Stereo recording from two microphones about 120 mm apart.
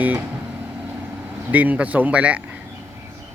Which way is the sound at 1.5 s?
10° right (ahead or behind).